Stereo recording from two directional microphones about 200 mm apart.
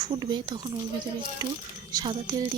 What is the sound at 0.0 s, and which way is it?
Speech, 20° right (ahead or behind).